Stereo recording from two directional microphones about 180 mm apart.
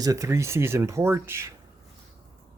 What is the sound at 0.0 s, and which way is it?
Speech, 20° right (ahead or behind).